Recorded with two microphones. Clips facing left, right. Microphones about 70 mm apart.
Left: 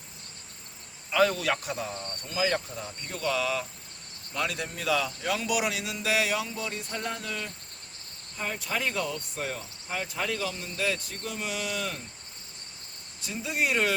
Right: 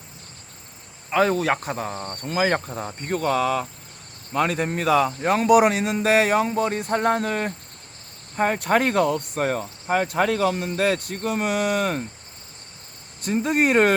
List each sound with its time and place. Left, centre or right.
1.1 s speech: right
13.2 s speech: right